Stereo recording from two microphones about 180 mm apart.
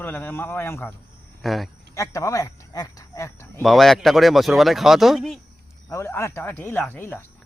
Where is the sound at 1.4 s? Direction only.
Centre (ahead or behind).